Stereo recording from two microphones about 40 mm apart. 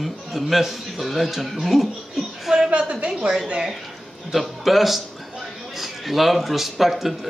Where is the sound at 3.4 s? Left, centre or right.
Right.